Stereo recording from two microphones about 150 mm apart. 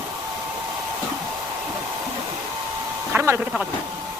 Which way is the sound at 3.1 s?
15° right (ahead or behind).